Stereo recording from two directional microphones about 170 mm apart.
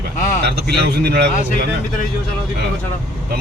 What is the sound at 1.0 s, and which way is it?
Speech, 70° right (ahead or behind).